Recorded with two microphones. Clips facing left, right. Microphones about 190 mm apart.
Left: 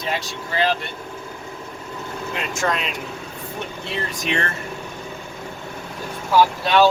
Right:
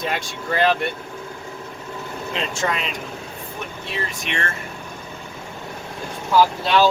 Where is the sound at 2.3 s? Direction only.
25° right (ahead or behind).